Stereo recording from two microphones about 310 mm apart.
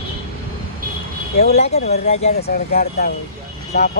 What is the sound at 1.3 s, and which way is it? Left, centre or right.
Speech, left.